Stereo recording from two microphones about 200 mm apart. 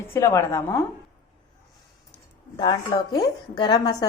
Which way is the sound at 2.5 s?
20° left (ahead or behind).